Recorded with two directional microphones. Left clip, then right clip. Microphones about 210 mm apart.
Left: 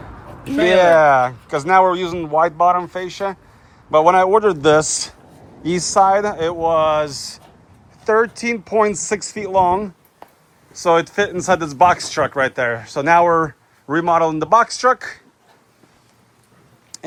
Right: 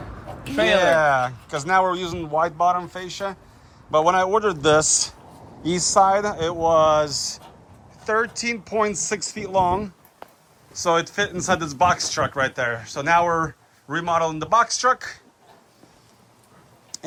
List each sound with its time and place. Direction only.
0.4 s speech: 5° right (ahead or behind); by 2.8 s 20° right (ahead or behind)
2.8 s speech: 10° right (ahead or behind)
16.9 s a sound: 15° right (ahead or behind)